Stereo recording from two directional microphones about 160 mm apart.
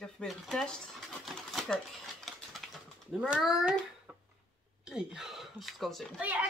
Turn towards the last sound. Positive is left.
turn(degrees=-10)  # may be behind; listen again after turning